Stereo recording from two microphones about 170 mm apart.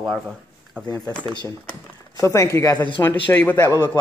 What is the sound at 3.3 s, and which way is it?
Speech, 10° left (ahead or behind).